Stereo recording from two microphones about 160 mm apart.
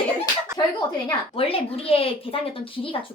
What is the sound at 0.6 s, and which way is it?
Speech, 25° left (ahead or behind).